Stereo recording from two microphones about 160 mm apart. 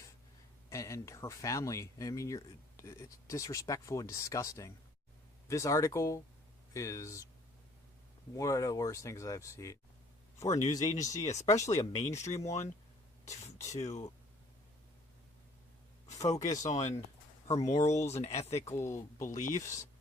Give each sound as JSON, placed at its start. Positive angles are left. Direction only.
{"t": 0.7, "sound": "speech", "side_deg": 20}
{"t": 8.4, "sound": "speech", "side_deg": 20}
{"t": 12.5, "sound": "speech", "side_deg": 45}
{"t": 13.7, "sound": "speech", "side_deg": 45}
{"t": 16.0, "sound": "speech", "side_deg": 20}
{"t": 16.6, "sound": "speech", "side_deg": 50}
{"t": 18.7, "sound": "speech", "side_deg": 15}
{"t": 19.2, "sound": "speech", "side_deg": 55}
{"t": 19.5, "sound": "speech", "side_deg": 20}